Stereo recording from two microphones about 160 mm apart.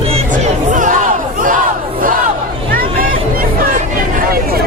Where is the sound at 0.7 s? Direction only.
55° right (ahead or behind).